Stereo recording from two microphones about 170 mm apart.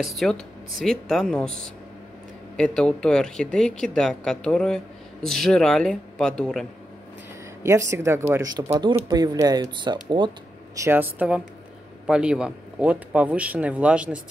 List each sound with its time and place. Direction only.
0.0 s speech: centre (ahead or behind)
7.6 s speech: 15° right (ahead or behind)
10.8 s speech: 10° right (ahead or behind)